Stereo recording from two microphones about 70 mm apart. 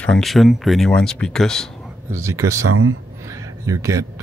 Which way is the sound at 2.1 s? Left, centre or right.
Right.